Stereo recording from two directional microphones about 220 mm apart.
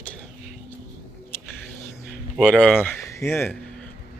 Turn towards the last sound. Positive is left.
turn(degrees=10)  # may be behind; listen again after turning